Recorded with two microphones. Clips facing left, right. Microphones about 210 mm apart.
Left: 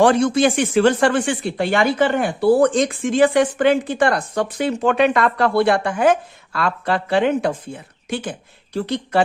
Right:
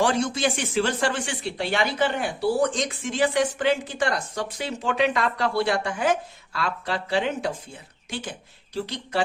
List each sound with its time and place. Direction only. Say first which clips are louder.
0.0 s speech: left 8 dB; 60° left (ahead or behind)